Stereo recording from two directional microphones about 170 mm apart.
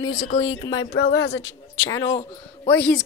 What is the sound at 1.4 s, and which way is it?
A man's voice, 20° left (ahead or behind).